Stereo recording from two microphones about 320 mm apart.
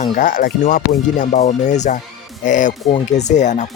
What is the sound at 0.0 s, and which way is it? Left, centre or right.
Speech, left.